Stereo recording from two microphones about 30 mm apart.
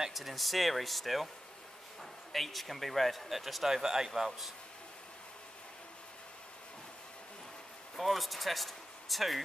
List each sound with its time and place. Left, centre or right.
0.1 s speech: centre
2.3 s speech: centre
3.6 s speech: centre
7.9 s speech: centre